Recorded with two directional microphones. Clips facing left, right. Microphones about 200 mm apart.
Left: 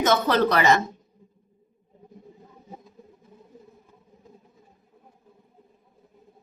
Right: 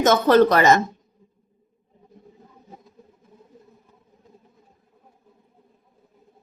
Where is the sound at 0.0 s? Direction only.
45° right (ahead or behind).